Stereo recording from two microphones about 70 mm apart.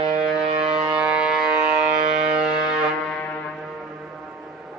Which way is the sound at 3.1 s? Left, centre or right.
Centre.